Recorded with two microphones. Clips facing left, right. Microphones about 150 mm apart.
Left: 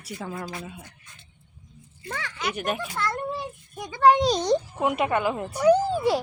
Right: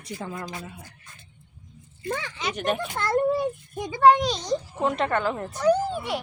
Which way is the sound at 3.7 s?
15° right (ahead or behind).